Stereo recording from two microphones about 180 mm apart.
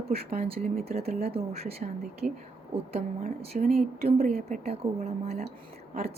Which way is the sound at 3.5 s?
45° right (ahead or behind).